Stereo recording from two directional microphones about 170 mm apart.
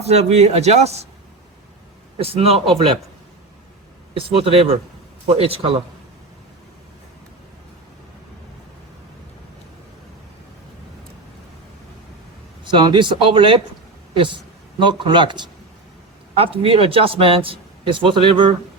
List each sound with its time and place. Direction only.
0.0 s a man's voice: 40° right (ahead or behind)
2.1 s a man's voice: 35° right (ahead or behind)
4.1 s a man's voice: 35° right (ahead or behind)
12.6 s a man's voice: 30° right (ahead or behind)